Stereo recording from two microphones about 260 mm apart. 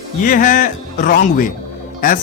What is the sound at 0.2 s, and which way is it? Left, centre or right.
Speech, left.